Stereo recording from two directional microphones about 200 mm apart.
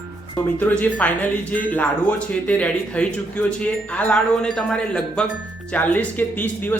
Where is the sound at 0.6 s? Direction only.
5° left (ahead or behind).